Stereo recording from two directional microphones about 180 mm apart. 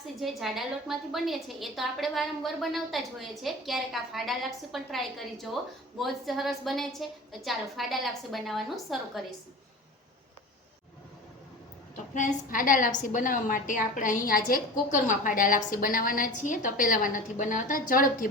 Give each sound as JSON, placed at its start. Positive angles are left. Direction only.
{"t": 0.2, "sound": "a woman's voice", "side_deg": 0}
{"t": 12.1, "sound": "a woman's voice", "side_deg": 50}